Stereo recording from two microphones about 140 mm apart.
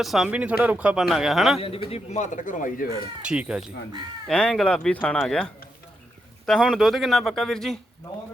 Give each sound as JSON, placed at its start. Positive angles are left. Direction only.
{"t": 0.0, "sound": "speech", "side_deg": 0}
{"t": 1.5, "sound": "a man's voice", "side_deg": 40}
{"t": 3.2, "sound": "speech", "side_deg": -5}
{"t": 4.3, "sound": "speech", "side_deg": 5}